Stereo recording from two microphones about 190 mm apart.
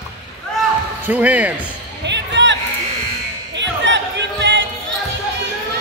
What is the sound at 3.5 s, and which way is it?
Music, 70° right (ahead or behind).